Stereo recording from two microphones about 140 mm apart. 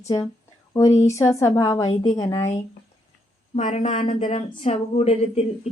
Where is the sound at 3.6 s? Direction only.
60° left (ahead or behind).